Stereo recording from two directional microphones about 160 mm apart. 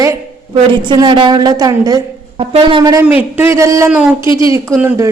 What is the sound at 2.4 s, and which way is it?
Speech, 35° right (ahead or behind).